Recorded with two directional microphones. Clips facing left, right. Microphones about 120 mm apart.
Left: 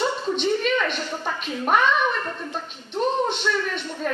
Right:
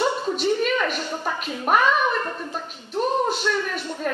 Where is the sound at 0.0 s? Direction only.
5° right (ahead or behind).